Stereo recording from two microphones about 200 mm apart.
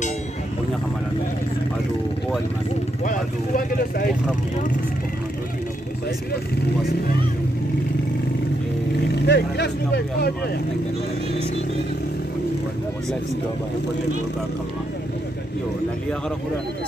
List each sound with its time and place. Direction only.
3.1 s speech: 45° left (ahead or behind)
9.2 s speech: 55° left (ahead or behind)